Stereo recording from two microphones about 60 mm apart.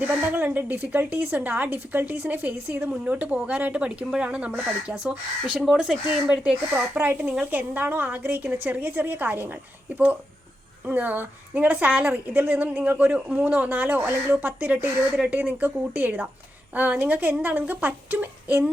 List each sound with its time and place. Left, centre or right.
0.0 s a woman's voice: right
2.9 s speech: right
10.8 s speech: right